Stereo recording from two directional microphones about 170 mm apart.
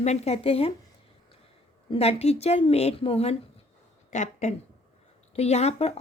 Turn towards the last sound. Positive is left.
turn(degrees=40)  # may be behind; listen again after turning